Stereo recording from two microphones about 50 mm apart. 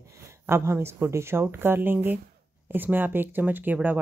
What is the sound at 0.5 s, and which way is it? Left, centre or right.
Speech, right.